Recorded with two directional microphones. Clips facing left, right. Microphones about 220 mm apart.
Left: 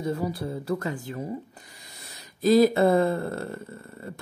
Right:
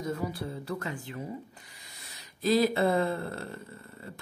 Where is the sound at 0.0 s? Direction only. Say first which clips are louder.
Left 5 dB; 35° left (ahead or behind).